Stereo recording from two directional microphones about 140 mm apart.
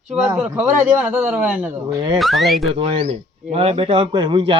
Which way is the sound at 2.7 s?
45° right (ahead or behind).